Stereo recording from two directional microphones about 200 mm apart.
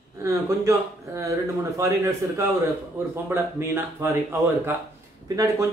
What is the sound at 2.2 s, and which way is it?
A man's voice, 15° right (ahead or behind).